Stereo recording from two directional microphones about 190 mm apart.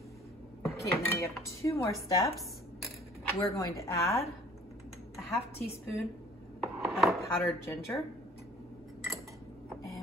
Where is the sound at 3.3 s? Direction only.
15° left (ahead or behind).